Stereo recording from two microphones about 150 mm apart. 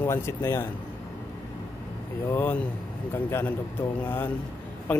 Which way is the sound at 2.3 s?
10° left (ahead or behind).